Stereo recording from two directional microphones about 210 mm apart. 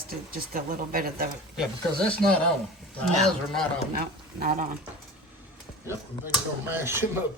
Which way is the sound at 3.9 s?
45° right (ahead or behind).